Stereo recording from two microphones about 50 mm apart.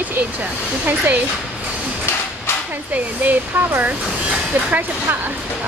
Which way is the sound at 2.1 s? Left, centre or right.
Left.